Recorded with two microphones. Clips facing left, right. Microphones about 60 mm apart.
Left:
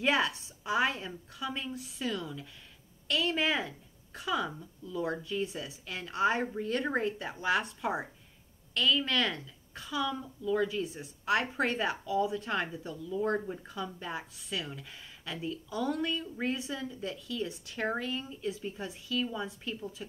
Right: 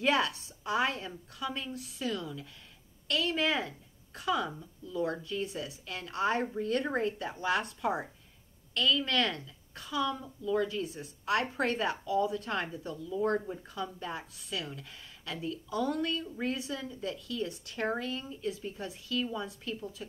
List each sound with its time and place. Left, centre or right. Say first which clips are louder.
0.0 s a woman's voice: even; centre
2.2 s a woman's voice: even; centre
10.6 s a woman's voice: left 1 dB; centre